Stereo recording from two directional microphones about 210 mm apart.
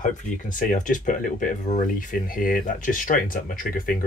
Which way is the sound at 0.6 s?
40° left (ahead or behind).